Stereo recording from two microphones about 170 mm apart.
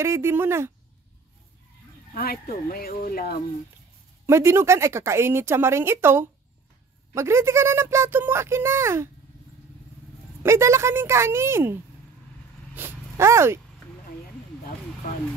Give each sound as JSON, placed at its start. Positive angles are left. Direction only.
{"t": 0.0, "sound": "speech", "side_deg": -15}
{"t": 2.1, "sound": "speech", "side_deg": 60}
{"t": 4.3, "sound": "speech", "side_deg": -15}
{"t": 10.4, "sound": "speech", "side_deg": -15}
{"t": 12.7, "sound": "dog", "side_deg": -15}